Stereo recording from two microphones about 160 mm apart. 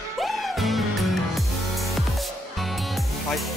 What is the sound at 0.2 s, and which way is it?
Music, centre (ahead or behind).